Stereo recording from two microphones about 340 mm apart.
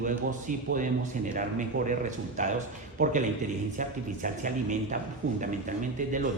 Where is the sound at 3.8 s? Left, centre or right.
Right.